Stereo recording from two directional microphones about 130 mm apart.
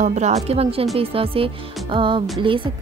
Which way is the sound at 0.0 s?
60° right (ahead or behind).